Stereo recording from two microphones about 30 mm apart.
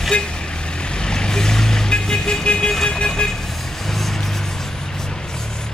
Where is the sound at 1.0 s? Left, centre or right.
Left.